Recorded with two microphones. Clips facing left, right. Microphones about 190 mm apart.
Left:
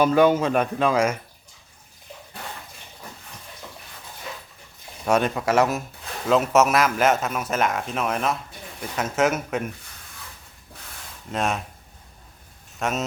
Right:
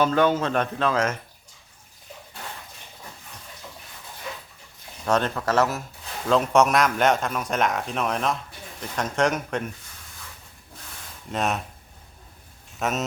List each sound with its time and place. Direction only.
0.0 s speech: 10° left (ahead or behind)
5.0 s speech: 10° left (ahead or behind)
6.2 s speech: 5° left (ahead or behind)
11.3 s speech: centre (ahead or behind)
12.8 s speech: centre (ahead or behind)